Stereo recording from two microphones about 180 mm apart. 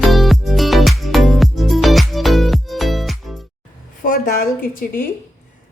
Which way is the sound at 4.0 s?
50° left (ahead or behind).